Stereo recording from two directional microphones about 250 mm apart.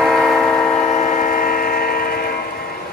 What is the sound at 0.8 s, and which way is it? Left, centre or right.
Train, left.